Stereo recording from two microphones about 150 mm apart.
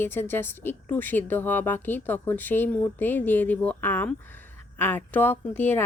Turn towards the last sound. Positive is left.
turn(degrees=15)  # may be behind; listen again after turning